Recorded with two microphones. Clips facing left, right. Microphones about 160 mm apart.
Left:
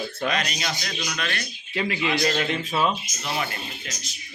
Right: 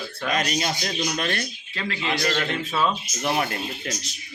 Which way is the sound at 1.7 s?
15° left (ahead or behind).